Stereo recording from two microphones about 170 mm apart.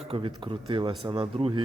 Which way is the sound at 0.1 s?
35° right (ahead or behind).